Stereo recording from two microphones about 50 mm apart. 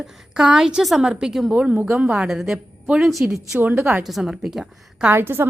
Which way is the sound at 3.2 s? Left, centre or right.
Right.